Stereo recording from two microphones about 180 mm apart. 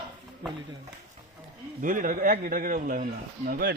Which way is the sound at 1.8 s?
50° right (ahead or behind).